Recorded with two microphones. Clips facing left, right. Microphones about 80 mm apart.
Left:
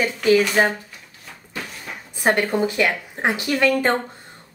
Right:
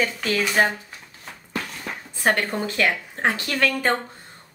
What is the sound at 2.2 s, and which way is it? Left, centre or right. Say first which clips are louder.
Speech: left 3 dB; centre.